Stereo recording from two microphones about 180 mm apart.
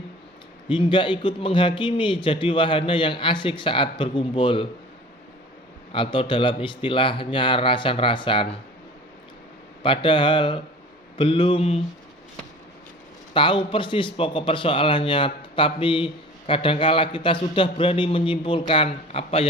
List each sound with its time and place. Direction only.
0.7 s a man's voice: 25° left (ahead or behind)
5.9 s a man's voice: 30° left (ahead or behind)
9.8 s a man's voice: 30° left (ahead or behind)
13.3 s a man's voice: 30° left (ahead or behind)